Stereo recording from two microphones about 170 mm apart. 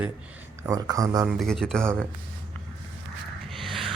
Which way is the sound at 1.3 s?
Centre (ahead or behind).